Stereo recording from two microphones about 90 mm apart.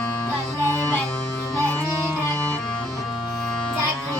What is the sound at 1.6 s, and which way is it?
Music, 15° left (ahead or behind).